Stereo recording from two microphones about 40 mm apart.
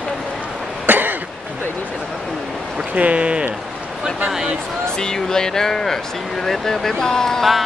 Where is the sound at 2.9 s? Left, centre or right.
Right.